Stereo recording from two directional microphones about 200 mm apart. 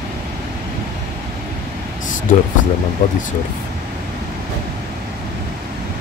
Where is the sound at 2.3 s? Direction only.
40° left (ahead or behind).